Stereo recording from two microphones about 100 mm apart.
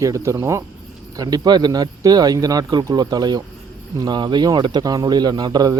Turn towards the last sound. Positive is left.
turn(degrees=-45)  # may be behind; listen again after turning